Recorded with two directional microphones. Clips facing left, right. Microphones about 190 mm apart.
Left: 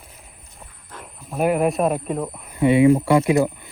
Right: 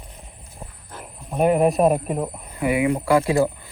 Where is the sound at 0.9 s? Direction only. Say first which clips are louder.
Right 2 dB; 5° right (ahead or behind).